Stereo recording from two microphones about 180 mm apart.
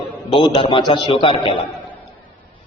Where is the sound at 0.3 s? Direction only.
30° left (ahead or behind).